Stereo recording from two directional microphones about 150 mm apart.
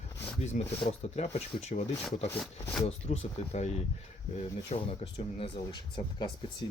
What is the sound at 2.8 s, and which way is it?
Speech, 45° left (ahead or behind).